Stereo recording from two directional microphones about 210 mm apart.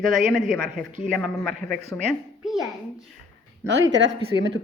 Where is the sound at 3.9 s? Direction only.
60° right (ahead or behind).